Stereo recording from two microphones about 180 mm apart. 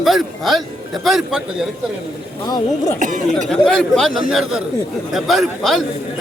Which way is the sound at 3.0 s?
45° right (ahead or behind).